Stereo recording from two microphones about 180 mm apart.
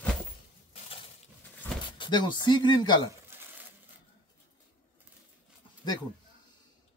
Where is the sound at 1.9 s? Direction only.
25° left (ahead or behind).